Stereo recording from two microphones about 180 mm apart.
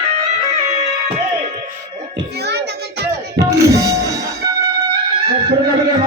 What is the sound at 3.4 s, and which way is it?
Music, 15° right (ahead or behind).